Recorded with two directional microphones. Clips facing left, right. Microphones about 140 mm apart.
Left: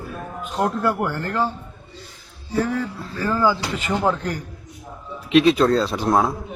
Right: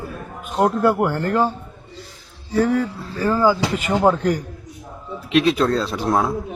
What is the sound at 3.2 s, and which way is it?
Speech, 15° right (ahead or behind).